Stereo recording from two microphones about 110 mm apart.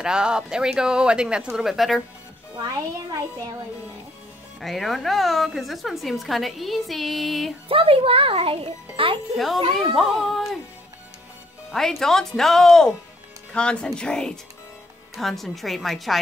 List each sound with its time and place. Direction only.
0.0 s speech: 5° right (ahead or behind)
4.6 s a woman's voice: centre (ahead or behind)
7.6 s a child's voice: 55° right (ahead or behind)
9.8 s a woman's voice: centre (ahead or behind)
11.7 s a woman's voice: 5° left (ahead or behind)